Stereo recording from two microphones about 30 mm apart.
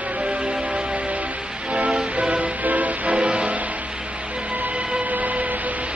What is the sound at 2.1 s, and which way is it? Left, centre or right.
Music, right.